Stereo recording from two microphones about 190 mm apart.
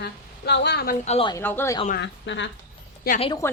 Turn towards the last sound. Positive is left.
turn(degrees=30)  # may be behind; listen again after turning